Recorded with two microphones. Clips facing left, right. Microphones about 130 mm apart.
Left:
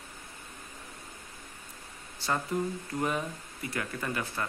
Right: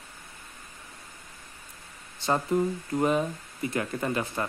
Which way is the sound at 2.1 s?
20° right (ahead or behind).